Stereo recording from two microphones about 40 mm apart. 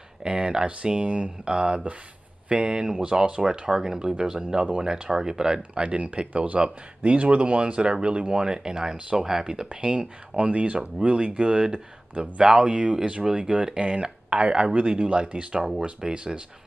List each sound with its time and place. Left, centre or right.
0.2 s speech: right
3.4 s speech: centre
5.6 s speech: right
9.7 s speech: right